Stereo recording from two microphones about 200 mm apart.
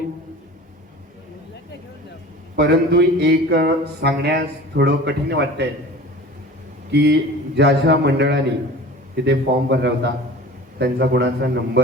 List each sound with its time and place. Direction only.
2.6 s speech: 55° right (ahead or behind)
6.9 s speech: 55° right (ahead or behind)